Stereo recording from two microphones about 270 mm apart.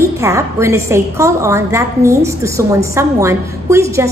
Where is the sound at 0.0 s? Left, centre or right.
Centre.